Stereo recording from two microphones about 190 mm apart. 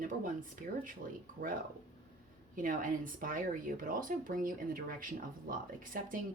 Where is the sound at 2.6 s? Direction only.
45° right (ahead or behind).